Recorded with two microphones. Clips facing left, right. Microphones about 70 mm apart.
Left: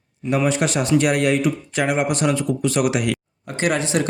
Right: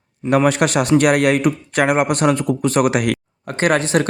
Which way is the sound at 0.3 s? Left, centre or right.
Right.